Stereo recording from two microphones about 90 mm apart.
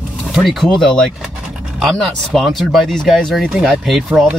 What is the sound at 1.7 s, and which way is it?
Speech, centre (ahead or behind).